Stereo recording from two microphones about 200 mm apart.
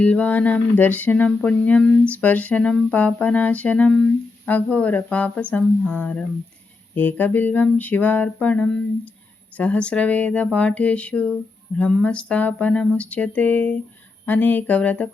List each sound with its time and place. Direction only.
0.0 s speech: 5° left (ahead or behind)